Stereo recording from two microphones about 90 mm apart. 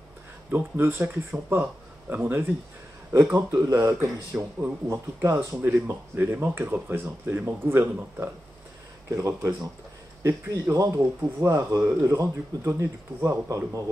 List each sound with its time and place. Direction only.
0.5 s speech: 25° right (ahead or behind)
3.5 s speech: 35° right (ahead or behind)
4.3 s speech: 20° right (ahead or behind)
5.6 s speech: 20° right (ahead or behind); by 13.8 s 35° right (ahead or behind)